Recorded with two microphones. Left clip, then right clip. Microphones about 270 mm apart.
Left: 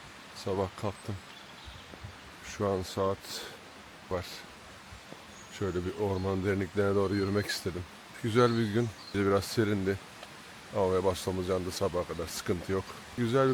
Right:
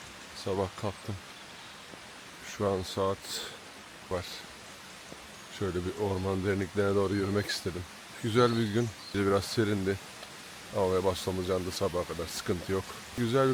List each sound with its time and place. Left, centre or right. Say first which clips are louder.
0.6 s speech: even; centre
2.6 s speech: right 1 dB; centre
2.8 s speech: even; centre
5.5 s speech: even; centre
12.2 s speech: even; centre